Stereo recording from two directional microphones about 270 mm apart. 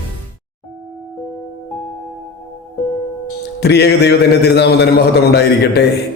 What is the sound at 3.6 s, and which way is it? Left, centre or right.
A man's voice, left.